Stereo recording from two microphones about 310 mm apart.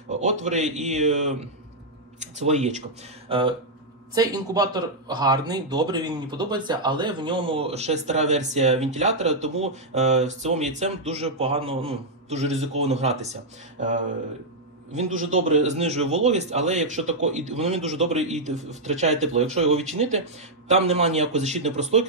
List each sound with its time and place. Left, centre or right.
0.1 s a man's voice: right
15.1 s a man's voice: right
15.4 s speech: right